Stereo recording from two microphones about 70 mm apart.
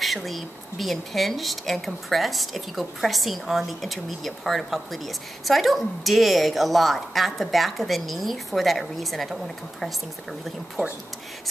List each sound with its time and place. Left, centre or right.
0.0 s a woman's voice: centre
10.8 s speech: right